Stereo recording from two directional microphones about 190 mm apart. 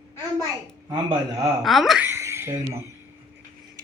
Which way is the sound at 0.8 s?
20° right (ahead or behind).